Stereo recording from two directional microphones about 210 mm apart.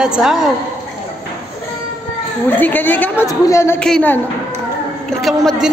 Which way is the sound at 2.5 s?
10° left (ahead or behind).